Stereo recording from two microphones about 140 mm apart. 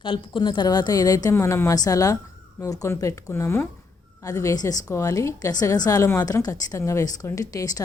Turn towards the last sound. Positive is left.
turn(degrees=25)  # may be behind; listen again after turning